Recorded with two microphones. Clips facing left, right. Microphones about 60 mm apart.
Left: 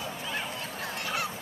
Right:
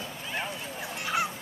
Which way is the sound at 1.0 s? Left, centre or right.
Centre.